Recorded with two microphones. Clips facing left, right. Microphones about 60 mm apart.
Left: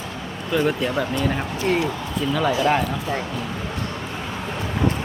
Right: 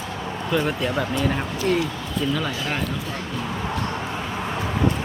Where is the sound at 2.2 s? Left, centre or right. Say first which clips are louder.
Left 4 dB; centre.